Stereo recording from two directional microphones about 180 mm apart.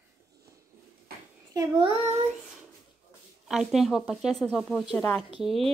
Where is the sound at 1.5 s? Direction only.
25° right (ahead or behind).